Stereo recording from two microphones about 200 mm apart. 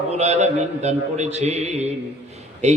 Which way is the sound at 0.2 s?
35° right (ahead or behind).